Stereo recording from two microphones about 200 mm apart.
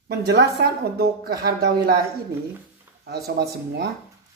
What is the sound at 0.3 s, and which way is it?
Speech, 55° right (ahead or behind).